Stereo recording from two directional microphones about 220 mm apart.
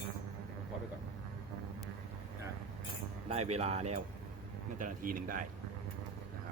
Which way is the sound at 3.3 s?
30° right (ahead or behind).